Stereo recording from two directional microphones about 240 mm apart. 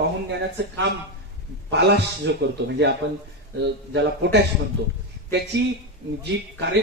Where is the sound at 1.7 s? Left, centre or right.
Right.